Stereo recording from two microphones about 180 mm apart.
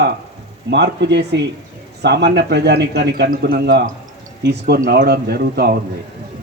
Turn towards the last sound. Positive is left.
turn(degrees=-65)  # may be behind; listen again after turning